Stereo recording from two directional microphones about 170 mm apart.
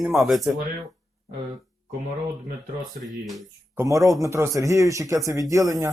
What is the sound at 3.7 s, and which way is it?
Speech, 20° right (ahead or behind).